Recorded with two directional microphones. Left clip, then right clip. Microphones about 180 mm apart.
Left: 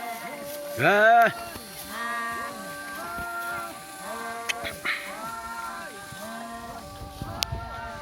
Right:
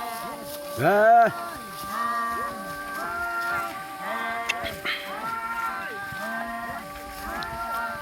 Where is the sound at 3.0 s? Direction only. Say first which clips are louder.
Right 5 dB; 45° left (ahead or behind).